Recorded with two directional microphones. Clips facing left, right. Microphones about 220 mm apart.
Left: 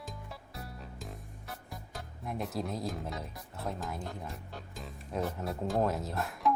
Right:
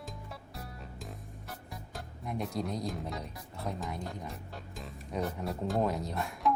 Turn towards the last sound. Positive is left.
turn(degrees=0)  # may be behind; listen again after turning